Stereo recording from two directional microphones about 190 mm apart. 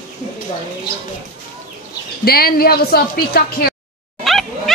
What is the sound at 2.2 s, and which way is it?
A woman's voice, 55° left (ahead or behind).